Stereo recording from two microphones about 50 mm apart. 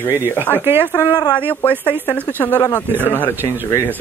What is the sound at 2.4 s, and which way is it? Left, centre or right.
Speech, left.